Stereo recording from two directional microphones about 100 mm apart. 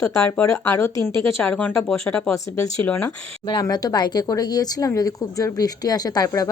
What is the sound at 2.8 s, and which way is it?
Speech, 25° left (ahead or behind).